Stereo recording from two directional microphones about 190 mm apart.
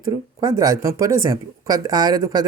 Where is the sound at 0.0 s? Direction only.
15° right (ahead or behind).